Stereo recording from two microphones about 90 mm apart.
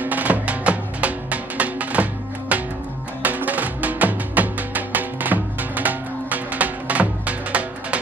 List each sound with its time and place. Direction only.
0.0 s music: 20° right (ahead or behind)